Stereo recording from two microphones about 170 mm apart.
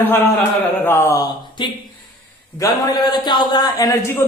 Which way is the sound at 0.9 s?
15° left (ahead or behind).